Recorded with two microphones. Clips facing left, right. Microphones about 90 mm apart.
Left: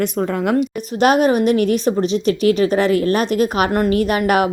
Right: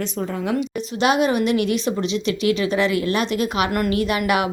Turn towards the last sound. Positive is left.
turn(degrees=40)  # may be behind; listen again after turning